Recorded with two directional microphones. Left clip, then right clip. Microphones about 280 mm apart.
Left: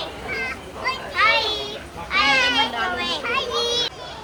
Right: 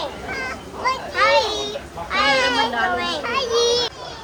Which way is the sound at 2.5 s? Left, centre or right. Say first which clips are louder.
Right 2 dB; right.